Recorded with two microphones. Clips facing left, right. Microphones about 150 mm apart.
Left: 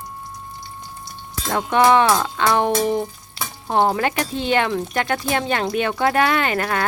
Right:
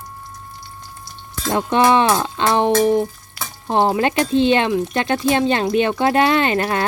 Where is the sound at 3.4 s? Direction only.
25° left (ahead or behind).